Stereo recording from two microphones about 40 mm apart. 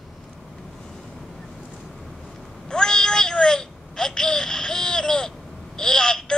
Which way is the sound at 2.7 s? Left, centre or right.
Centre.